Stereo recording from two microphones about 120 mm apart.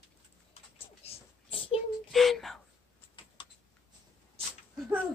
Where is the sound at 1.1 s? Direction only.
50° left (ahead or behind).